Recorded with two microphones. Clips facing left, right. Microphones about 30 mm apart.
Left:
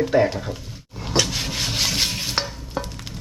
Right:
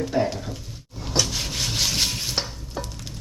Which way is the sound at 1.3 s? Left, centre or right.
Centre.